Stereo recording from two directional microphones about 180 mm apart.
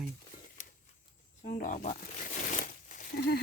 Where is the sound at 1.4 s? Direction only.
45° left (ahead or behind).